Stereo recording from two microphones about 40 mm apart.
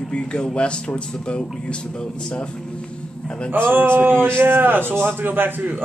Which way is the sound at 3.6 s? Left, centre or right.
Right.